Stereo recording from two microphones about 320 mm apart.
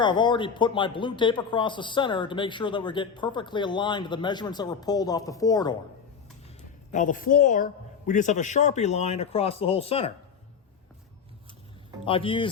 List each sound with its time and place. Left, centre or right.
0.0 s speech: centre
6.9 s a man's voice: left
12.0 s speech: centre